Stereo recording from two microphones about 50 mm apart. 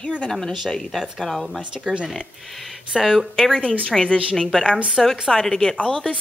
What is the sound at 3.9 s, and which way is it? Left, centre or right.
Speech, left.